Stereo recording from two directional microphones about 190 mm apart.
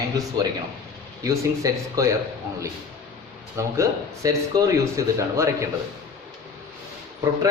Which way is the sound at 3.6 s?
15° right (ahead or behind).